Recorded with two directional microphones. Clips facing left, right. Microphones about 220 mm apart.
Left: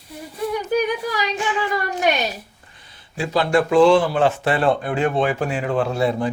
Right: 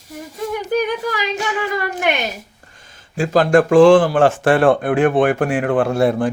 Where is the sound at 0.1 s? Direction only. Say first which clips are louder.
Even; 45° right (ahead or behind).